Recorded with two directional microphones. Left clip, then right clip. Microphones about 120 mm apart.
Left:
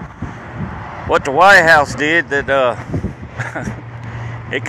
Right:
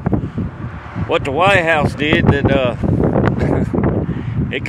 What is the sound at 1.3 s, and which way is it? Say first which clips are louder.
Speech: left 6 dB; 70° right (ahead or behind).